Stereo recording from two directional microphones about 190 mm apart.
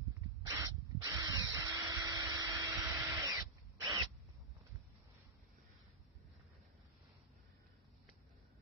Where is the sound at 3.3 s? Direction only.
20° right (ahead or behind).